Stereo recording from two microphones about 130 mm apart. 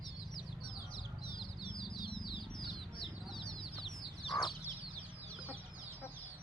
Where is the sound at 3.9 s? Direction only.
35° left (ahead or behind).